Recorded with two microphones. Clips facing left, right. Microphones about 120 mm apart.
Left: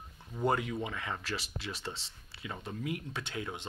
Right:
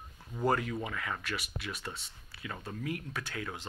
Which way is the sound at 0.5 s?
20° left (ahead or behind).